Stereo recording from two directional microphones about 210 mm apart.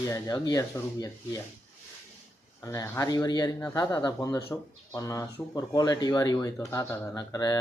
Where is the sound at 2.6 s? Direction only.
15° left (ahead or behind).